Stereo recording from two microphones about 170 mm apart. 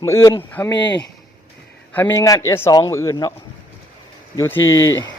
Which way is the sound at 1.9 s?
10° left (ahead or behind).